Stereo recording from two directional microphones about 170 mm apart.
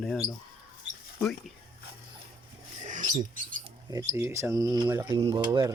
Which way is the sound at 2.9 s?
45° right (ahead or behind).